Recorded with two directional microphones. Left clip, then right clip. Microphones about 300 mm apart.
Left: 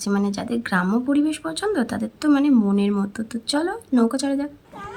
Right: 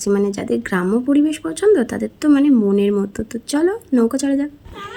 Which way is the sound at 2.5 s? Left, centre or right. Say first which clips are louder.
Right 4 dB; left.